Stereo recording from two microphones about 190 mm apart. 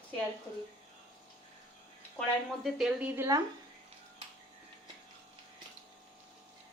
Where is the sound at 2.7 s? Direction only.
Centre (ahead or behind).